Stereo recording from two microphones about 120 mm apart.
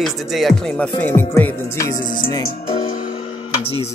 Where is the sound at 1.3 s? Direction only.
25° left (ahead or behind).